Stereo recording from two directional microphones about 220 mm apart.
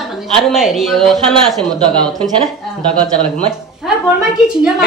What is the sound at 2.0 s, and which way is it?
Speech, 20° right (ahead or behind).